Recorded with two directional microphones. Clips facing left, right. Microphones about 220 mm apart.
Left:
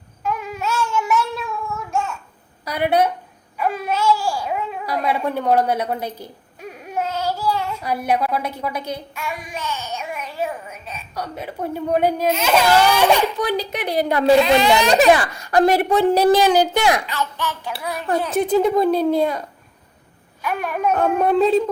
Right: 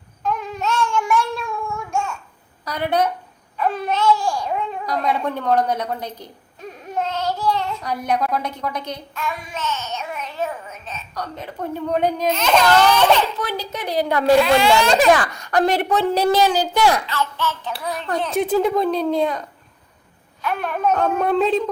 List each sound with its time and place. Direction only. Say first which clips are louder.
0.2 s child singing: right 1 dB; 10° left (ahead or behind)
2.6 s a woman's voice: left 2 dB; 10° left (ahead or behind)
20.4 s a child's voice: even; 10° left (ahead or behind)